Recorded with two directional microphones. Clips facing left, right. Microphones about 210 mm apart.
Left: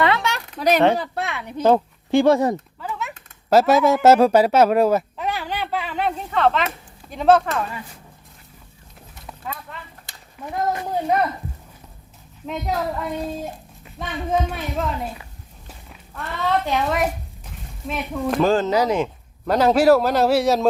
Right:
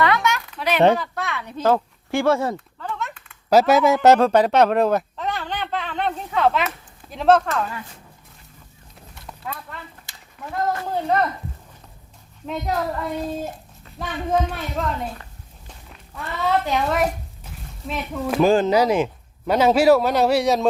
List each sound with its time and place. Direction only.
0.0 s a sound: 30° left (ahead or behind)
0.9 s speech: 35° left (ahead or behind)
1.3 s speech: 15° left (ahead or behind)
2.8 s a sound: 5° left (ahead or behind)
3.5 s a child's voice: centre (ahead or behind)
9.2 s clip-clop: 5° left (ahead or behind)
10.4 s speech: 20° left (ahead or behind)
12.5 s a child's voice: centre (ahead or behind)
14.5 s walk: centre (ahead or behind)
16.6 s speech: centre (ahead or behind)